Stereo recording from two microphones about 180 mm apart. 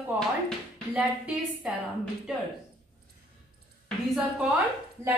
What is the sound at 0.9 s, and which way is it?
Speech, 5° right (ahead or behind).